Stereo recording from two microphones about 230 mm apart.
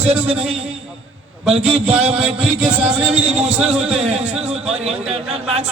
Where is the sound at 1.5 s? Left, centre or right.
Right.